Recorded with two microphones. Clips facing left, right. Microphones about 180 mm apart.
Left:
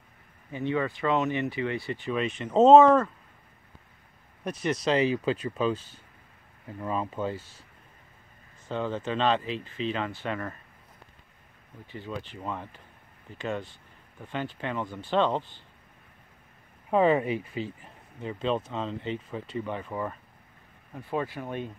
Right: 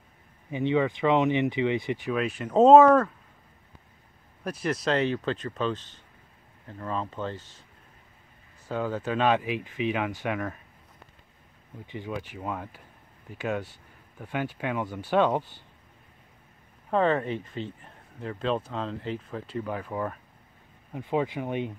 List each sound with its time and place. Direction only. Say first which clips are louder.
0.5 s speech: right 4 dB; 20° right (ahead or behind); by 3.1 s centre (ahead or behind)
4.6 s speech: left 1 dB; centre (ahead or behind)
6.8 s speech: left 2 dB; 10° left (ahead or behind)
8.6 s speech: right 1 dB; 5° right (ahead or behind)
11.8 s speech: right 2 dB; 15° right (ahead or behind)
16.9 s speech: left 2 dB; 10° left (ahead or behind)
20.9 s speech: right 4 dB; 20° right (ahead or behind)